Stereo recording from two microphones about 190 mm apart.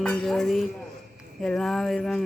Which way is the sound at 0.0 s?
5° left (ahead or behind).